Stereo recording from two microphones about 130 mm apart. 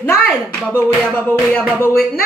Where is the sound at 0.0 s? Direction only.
10° left (ahead or behind).